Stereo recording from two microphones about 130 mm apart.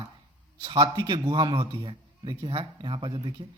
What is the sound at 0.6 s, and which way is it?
Speech, 35° right (ahead or behind).